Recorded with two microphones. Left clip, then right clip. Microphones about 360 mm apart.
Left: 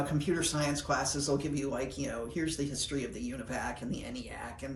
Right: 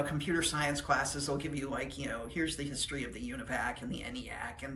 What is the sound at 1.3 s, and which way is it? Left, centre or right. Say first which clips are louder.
Speech: left 3 dB; centre.